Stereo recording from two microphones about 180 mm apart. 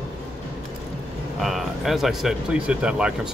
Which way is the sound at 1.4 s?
Centre (ahead or behind).